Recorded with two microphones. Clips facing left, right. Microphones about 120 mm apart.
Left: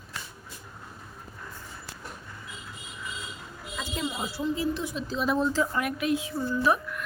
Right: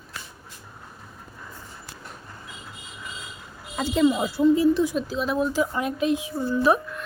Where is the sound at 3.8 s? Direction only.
55° right (ahead or behind).